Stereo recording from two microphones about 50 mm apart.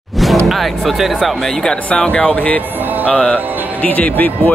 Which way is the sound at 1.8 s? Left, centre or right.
Left.